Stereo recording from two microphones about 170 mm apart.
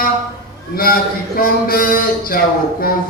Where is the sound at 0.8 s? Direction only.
60° left (ahead or behind).